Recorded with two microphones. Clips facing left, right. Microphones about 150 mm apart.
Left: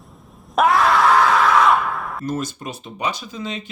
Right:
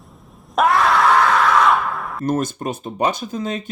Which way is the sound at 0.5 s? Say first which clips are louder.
Even; centre (ahead or behind).